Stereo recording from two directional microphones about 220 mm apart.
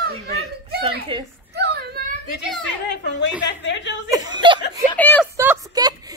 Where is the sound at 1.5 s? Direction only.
50° right (ahead or behind).